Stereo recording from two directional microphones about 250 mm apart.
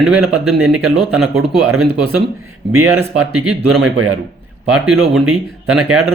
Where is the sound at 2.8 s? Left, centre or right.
Centre.